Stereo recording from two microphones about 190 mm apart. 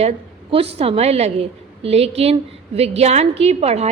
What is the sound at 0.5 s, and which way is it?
A woman's voice, 30° right (ahead or behind).